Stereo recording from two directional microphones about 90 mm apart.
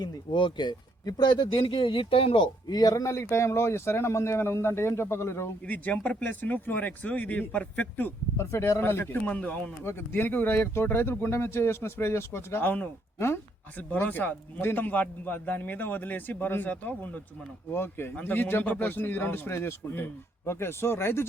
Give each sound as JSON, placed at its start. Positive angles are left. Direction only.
{"t": 0.3, "sound": "speech", "side_deg": 65}
{"t": 2.6, "sound": "speech", "side_deg": 45}
{"t": 5.6, "sound": "speech", "side_deg": 20}
{"t": 8.4, "sound": "speech", "side_deg": 30}